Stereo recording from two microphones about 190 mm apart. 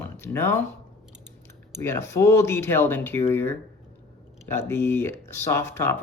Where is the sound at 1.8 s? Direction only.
15° left (ahead or behind).